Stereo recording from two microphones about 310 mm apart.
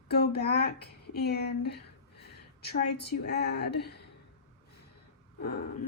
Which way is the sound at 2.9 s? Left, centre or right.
Left.